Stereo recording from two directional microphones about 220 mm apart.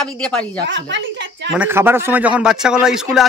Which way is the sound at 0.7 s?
55° right (ahead or behind).